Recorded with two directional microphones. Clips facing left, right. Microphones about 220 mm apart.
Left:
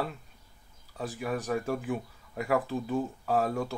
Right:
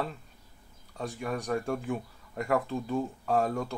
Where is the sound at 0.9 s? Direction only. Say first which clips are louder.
Left 1 dB; 5° left (ahead or behind).